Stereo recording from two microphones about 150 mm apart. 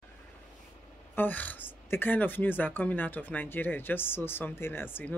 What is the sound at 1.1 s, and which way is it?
A man's voice, 10° left (ahead or behind).